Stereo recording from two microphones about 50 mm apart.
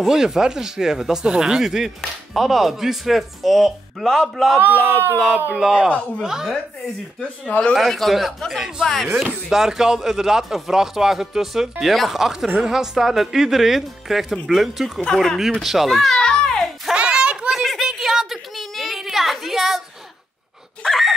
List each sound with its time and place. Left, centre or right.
0.0 s speech: centre
4.6 s speech: right
5.6 s speech: centre
5.9 s speech: left
6.2 s speech: centre
7.4 s speech: left
7.7 s speech: centre
8.8 s speech: centre
9.1 s speech: centre
16.2 s music: centre
16.9 s a sound: centre
17.5 s a sound: centre
20.8 s speech: centre